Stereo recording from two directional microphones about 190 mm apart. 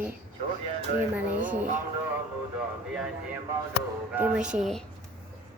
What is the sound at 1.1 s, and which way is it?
Speech, 10° right (ahead or behind).